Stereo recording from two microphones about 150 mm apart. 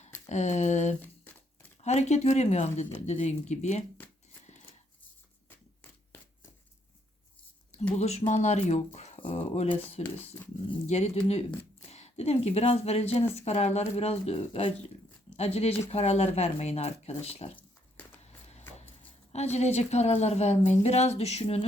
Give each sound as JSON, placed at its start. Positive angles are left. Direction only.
{"t": 0.3, "sound": "a woman's voice", "side_deg": 50}
{"t": 1.0, "sound": "crumpling", "side_deg": 10}
{"t": 1.8, "sound": "a woman's voice", "side_deg": 50}
{"t": 7.9, "sound": "a woman's voice", "side_deg": 45}
{"t": 17.6, "sound": "a sound", "side_deg": 10}
{"t": 19.3, "sound": "a woman's voice", "side_deg": 45}